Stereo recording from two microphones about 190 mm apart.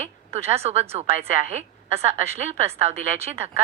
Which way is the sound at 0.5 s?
35° right (ahead or behind).